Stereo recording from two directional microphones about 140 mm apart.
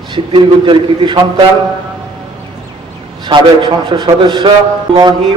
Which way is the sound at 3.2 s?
35° right (ahead or behind).